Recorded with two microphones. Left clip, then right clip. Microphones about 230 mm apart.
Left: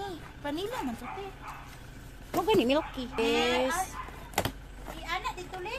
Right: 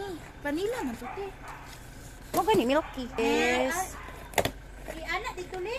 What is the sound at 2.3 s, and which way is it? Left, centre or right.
Speech, centre.